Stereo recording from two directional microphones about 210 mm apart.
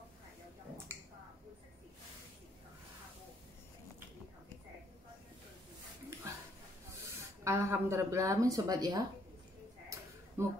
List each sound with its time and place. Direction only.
7.4 s speech: 10° right (ahead or behind)
10.4 s speech: 10° right (ahead or behind)